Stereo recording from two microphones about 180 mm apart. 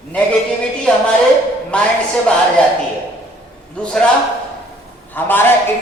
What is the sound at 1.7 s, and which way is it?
Speech, 5° left (ahead or behind).